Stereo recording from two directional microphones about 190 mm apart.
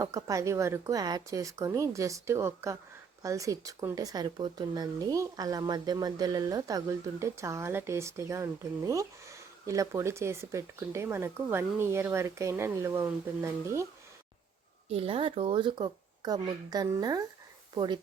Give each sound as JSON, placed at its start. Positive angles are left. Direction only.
{"t": 0.0, "sound": "speech", "side_deg": -15}
{"t": 14.8, "sound": "speech", "side_deg": -30}